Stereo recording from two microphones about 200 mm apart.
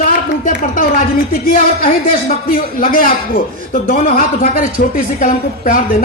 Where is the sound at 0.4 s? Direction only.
45° left (ahead or behind).